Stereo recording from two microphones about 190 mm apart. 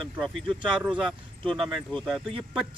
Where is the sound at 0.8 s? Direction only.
5° right (ahead or behind).